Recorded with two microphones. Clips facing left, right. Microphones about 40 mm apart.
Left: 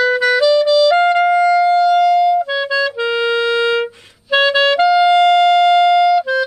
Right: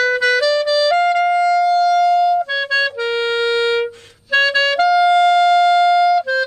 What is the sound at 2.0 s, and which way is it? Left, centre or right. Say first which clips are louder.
Clarinet: left 2 dB; centre.